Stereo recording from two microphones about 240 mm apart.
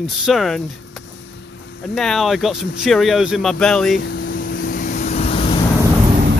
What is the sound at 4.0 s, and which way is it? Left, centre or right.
Vehicle, left.